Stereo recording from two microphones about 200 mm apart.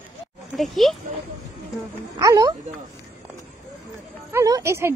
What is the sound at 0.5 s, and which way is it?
Speech, centre (ahead or behind).